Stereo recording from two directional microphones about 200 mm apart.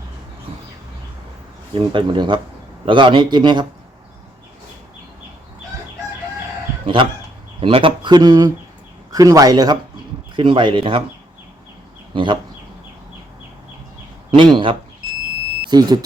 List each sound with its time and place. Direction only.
1.7 s a man's voice: 25° right (ahead or behind)
6.8 s a man's voice: 25° right (ahead or behind)
12.1 s speech: 25° right (ahead or behind)
14.3 s a man's voice: 25° right (ahead or behind)